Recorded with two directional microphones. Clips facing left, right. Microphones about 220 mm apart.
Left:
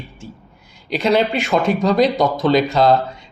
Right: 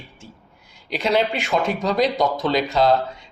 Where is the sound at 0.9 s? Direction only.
45° left (ahead or behind).